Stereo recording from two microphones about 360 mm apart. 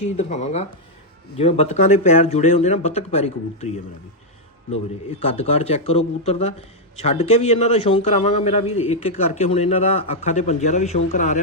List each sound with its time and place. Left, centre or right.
0.2 s speech: centre
5.2 s speech: centre